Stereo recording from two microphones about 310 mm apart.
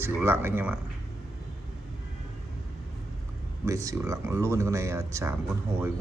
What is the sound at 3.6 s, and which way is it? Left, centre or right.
Speech, centre.